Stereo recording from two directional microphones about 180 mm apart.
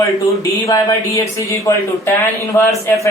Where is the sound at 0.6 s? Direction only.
15° left (ahead or behind).